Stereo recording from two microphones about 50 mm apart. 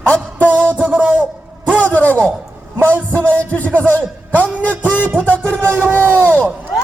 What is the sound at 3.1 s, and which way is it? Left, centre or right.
Speech, left.